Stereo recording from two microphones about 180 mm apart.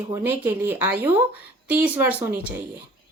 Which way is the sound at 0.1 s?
10° right (ahead or behind).